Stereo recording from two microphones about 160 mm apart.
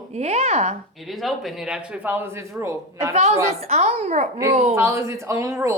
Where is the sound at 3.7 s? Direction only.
45° right (ahead or behind).